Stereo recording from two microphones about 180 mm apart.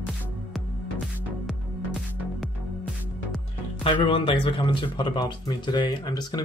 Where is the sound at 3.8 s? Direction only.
30° left (ahead or behind).